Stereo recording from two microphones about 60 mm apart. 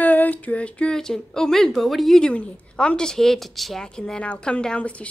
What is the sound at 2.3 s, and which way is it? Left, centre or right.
A woman's voice, centre.